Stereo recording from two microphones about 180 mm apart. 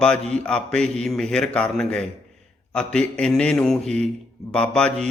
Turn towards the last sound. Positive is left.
turn(degrees=5)  # may be behind; listen again after turning